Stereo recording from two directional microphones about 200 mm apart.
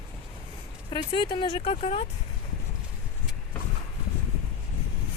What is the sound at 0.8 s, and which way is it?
Speech, 25° left (ahead or behind).